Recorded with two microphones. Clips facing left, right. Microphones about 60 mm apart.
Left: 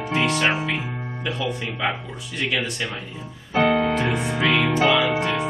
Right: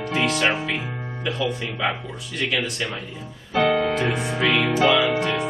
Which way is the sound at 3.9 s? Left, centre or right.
Centre.